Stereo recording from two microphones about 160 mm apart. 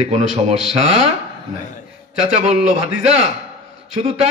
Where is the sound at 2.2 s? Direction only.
40° right (ahead or behind).